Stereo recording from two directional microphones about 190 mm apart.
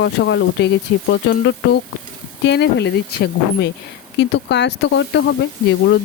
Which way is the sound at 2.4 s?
65° left (ahead or behind).